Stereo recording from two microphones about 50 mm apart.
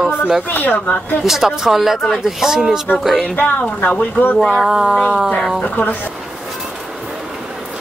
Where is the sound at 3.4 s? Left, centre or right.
Left.